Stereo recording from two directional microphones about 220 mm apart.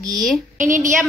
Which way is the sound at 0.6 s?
35° right (ahead or behind).